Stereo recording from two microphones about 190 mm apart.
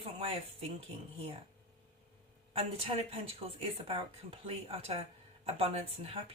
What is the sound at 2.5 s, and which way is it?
A woman's voice, 30° right (ahead or behind).